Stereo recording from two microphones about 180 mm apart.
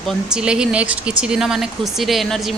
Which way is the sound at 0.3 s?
5° right (ahead or behind).